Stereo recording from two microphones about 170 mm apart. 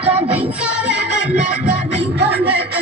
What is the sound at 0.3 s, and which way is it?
Music, 10° right (ahead or behind).